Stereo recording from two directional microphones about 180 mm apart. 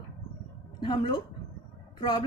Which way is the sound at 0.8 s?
25° left (ahead or behind).